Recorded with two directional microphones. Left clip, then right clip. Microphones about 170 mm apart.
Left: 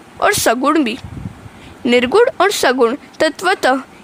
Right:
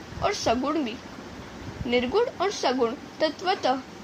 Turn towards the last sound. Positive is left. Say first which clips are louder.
# left 10 dB
turn(degrees=70)  # may be behind; listen again after turning